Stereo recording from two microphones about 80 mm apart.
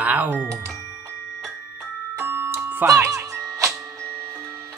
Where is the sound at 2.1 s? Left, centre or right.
Right.